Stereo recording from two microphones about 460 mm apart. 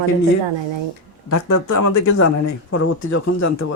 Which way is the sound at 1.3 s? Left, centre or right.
Left.